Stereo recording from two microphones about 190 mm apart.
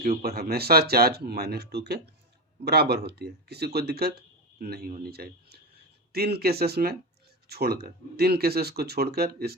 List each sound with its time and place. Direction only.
0.2 s speech: 55° right (ahead or behind)